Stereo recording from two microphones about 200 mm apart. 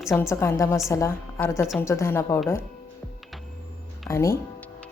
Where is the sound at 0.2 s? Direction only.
10° left (ahead or behind).